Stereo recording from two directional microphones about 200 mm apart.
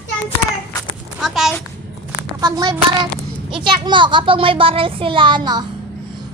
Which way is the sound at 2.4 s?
20° right (ahead or behind).